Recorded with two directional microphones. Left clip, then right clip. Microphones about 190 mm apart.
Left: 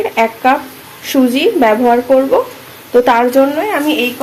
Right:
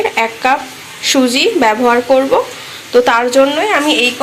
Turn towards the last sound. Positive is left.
turn(degrees=0)  # may be behind; listen again after turning